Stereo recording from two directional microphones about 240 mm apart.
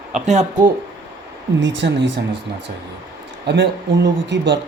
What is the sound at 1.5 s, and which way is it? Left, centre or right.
Speech, right.